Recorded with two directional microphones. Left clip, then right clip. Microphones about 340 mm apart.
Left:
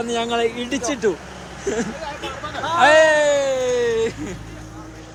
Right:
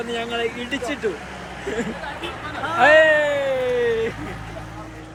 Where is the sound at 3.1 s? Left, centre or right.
Centre.